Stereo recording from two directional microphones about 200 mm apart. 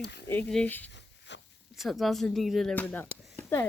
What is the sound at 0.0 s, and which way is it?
Speech, 60° left (ahead or behind).